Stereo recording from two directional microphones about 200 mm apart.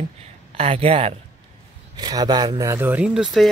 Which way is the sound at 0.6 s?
30° right (ahead or behind).